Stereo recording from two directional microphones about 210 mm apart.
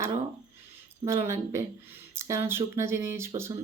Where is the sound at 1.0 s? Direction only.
10° right (ahead or behind).